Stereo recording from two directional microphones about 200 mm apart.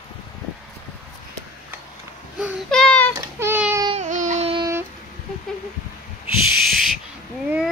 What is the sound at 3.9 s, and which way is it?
Baby cry, 40° right (ahead or behind).